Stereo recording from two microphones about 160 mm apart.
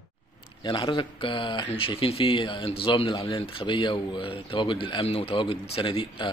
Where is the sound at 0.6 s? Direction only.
30° left (ahead or behind).